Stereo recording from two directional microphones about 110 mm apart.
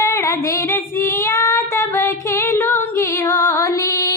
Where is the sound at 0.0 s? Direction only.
25° left (ahead or behind).